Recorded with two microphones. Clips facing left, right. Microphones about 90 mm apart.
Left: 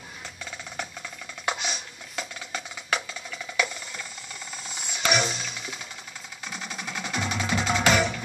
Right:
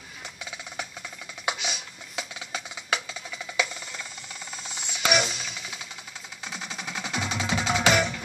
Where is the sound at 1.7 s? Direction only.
20° right (ahead or behind).